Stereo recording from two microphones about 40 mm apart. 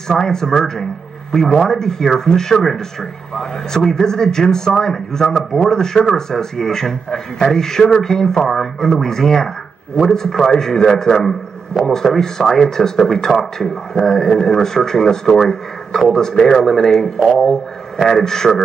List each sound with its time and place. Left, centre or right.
0.1 s a man's voice: centre